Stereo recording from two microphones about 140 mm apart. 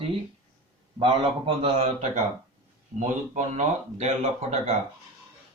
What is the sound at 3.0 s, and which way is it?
Speech, 60° right (ahead or behind).